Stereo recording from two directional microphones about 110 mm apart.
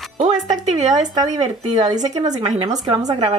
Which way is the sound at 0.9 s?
35° right (ahead or behind).